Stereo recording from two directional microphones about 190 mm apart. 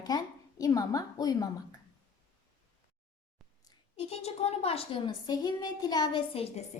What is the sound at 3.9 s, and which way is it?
A woman's voice, 35° left (ahead or behind).